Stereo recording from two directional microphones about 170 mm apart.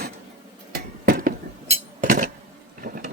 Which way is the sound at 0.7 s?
55° right (ahead or behind).